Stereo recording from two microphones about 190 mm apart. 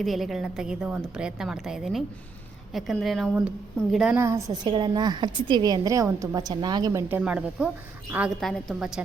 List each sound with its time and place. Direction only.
0.0 s a woman's voice: centre (ahead or behind)
4.2 s a woman's voice: 15° right (ahead or behind)
7.2 s a woman's voice: 5° right (ahead or behind)